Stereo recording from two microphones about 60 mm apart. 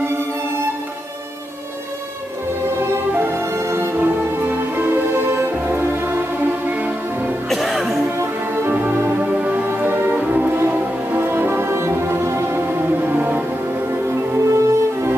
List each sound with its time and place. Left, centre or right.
3.1 s music: right
3.9 s music: right
7.4 s music: centre
9.2 s music: right
9.7 s music: right
11.1 s music: right
13.9 s music: right